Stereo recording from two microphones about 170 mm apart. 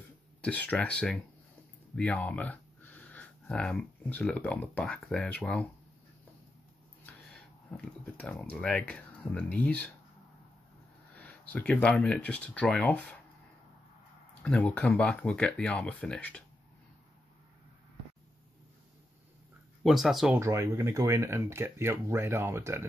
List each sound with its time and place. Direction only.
0.4 s speech: 10° left (ahead or behind)
7.7 s speech: 5° left (ahead or behind)
11.1 s speech: 10° left (ahead or behind)
14.4 s speech: 5° left (ahead or behind)
19.8 s speech: centre (ahead or behind)
20.3 s speech: 15° right (ahead or behind)